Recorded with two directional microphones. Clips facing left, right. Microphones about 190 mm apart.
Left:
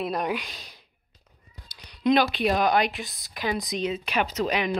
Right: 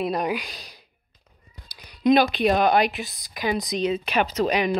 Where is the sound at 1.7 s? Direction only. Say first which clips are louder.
Right 3 dB; 10° right (ahead or behind).